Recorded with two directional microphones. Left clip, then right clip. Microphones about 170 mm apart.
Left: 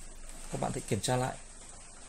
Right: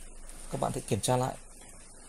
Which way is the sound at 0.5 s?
20° right (ahead or behind).